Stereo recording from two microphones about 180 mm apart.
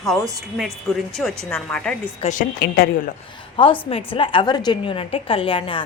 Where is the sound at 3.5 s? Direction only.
30° left (ahead or behind).